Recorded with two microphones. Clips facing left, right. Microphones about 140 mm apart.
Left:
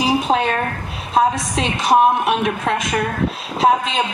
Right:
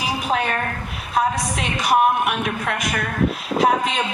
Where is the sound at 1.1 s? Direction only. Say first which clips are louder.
Left 4 dB; 25° left (ahead or behind).